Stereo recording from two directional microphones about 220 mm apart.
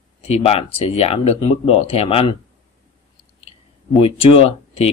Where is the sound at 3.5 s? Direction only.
25° left (ahead or behind).